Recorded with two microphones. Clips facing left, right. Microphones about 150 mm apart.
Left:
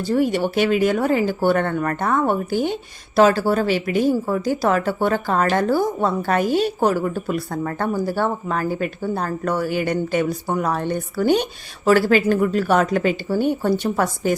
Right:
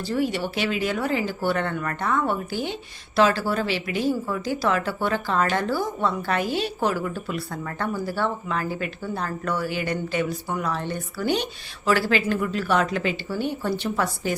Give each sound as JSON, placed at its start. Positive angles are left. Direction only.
{"t": 0.0, "sound": "speech", "side_deg": 45}